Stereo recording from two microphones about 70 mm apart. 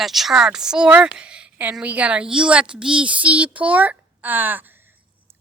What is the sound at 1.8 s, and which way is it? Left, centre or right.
A woman's voice, centre.